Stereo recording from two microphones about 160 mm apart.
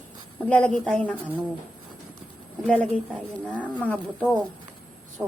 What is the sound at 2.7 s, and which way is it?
A woman's voice, 5° left (ahead or behind).